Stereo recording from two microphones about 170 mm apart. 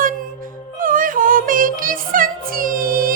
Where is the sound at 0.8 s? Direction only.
55° right (ahead or behind).